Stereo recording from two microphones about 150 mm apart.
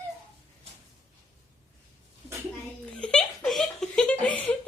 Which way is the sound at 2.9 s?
5° left (ahead or behind).